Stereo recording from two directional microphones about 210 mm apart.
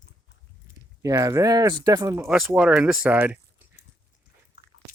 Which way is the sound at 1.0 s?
15° right (ahead or behind).